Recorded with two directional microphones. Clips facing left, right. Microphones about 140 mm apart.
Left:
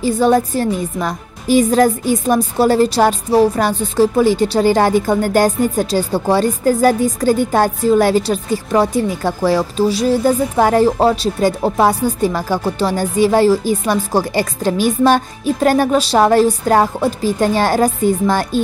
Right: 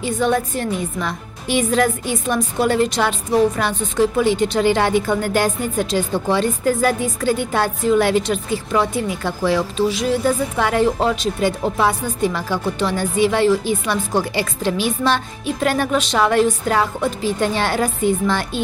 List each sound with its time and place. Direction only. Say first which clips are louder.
0.0 s a woman's voice: left 6 dB; 35° left (ahead or behind)